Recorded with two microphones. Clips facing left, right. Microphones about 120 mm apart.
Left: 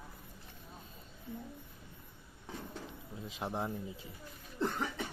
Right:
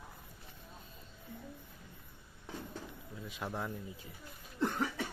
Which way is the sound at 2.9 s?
25° left (ahead or behind).